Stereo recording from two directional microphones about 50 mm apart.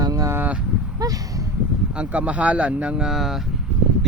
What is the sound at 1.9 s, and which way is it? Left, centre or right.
Speech, right.